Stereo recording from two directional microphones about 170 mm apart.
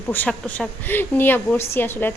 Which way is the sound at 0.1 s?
10° left (ahead or behind).